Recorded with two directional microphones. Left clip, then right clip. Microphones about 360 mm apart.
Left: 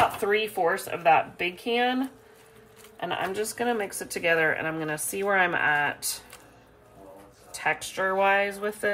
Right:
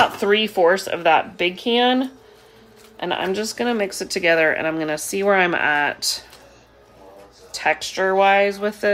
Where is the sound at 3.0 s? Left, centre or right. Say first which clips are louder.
Right 6 dB; right.